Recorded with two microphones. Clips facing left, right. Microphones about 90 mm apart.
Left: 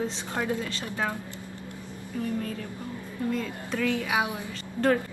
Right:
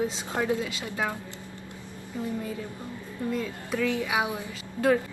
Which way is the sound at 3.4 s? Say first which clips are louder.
Right 1 dB; 5° right (ahead or behind).